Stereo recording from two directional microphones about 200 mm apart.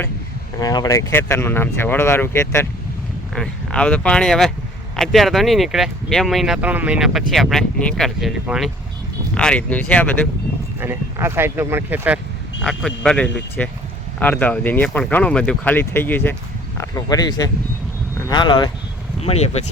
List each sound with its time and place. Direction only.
0.6 s speech: 20° left (ahead or behind)
10.8 s speech: 10° right (ahead or behind)
12.6 s speech: 5° left (ahead or behind); by 19.7 s 30° left (ahead or behind)